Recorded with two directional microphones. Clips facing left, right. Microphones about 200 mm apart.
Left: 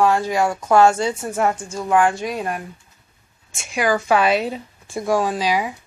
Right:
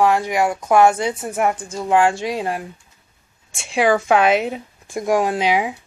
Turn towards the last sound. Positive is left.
turn(degrees=-25)  # may be behind; listen again after turning